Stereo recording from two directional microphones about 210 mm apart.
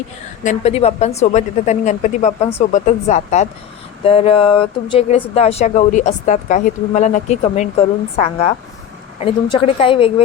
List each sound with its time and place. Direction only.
0.4 s a woman's voice: 30° left (ahead or behind)